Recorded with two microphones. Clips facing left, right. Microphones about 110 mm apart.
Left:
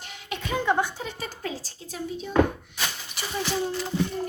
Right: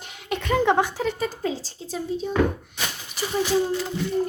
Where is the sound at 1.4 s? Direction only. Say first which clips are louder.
Right 6 dB; 30° right (ahead or behind).